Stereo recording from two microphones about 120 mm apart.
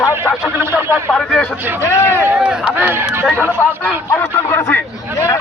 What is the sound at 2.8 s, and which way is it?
Speech, 20° right (ahead or behind).